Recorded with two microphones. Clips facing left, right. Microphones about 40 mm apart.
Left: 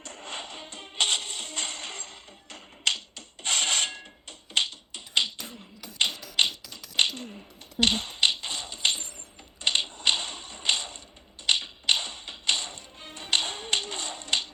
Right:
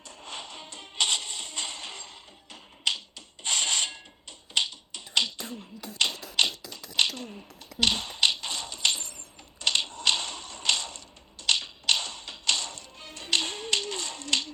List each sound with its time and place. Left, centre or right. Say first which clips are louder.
0.0 s music: left 2 dB; left
6.0 s tap: even; left
7.8 s typewriter: left 1 dB; left
9.6 s a sound: even; left
11.4 s tap: left 1 dB; left